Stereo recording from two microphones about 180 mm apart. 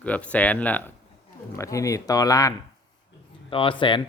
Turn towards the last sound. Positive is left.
turn(degrees=25)  # may be behind; listen again after turning